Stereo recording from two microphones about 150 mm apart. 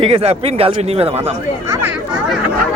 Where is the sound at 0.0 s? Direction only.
40° right (ahead or behind).